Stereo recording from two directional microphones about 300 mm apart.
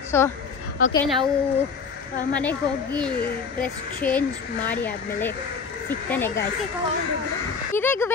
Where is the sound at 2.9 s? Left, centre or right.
Centre.